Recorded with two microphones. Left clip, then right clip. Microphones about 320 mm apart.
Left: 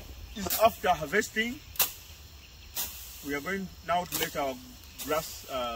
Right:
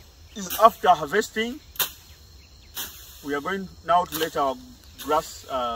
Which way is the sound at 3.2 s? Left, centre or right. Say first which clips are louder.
Right 6 dB; centre.